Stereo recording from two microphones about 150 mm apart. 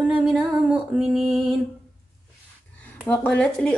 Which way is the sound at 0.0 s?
5° right (ahead or behind).